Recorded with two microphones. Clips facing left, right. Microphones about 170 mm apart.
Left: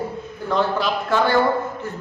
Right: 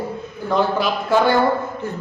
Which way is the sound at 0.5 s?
10° right (ahead or behind).